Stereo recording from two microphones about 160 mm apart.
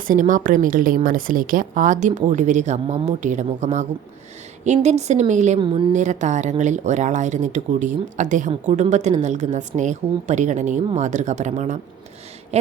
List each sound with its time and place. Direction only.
0.1 s speech: 55° right (ahead or behind)
5.5 s a woman's voice: 30° right (ahead or behind)
5.9 s speech: 50° right (ahead or behind)